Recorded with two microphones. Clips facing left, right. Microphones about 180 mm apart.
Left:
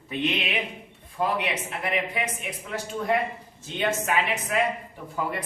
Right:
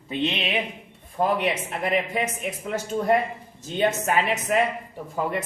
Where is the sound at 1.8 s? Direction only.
40° right (ahead or behind).